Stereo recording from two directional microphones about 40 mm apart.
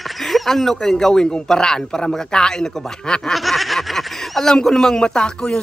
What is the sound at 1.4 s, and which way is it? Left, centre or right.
A man's voice, centre.